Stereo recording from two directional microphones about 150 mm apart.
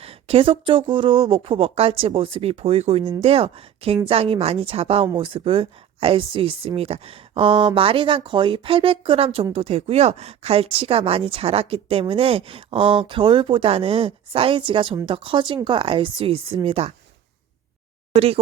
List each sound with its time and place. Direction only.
0.0 s speech: 40° right (ahead or behind)
18.1 s speech: 40° right (ahead or behind)